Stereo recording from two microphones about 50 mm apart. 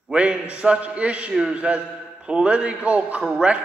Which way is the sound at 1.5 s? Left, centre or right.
Right.